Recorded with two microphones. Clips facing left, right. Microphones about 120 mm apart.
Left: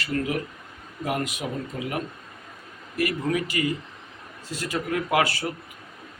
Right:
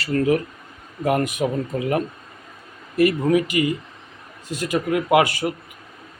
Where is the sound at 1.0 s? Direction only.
50° right (ahead or behind).